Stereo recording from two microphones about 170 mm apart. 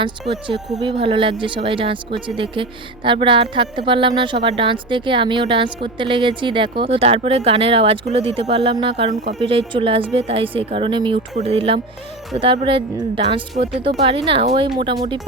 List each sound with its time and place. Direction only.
0.0 s a woman's voice: 30° right (ahead or behind)